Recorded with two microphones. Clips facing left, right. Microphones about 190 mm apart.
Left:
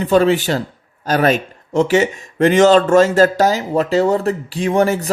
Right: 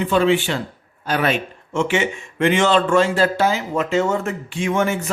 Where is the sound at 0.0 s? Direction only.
40° left (ahead or behind).